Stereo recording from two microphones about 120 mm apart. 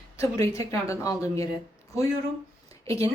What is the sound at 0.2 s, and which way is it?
Speech, 25° left (ahead or behind).